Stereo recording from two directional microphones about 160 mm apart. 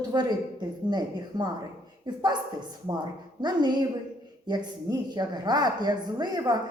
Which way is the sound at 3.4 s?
25° right (ahead or behind).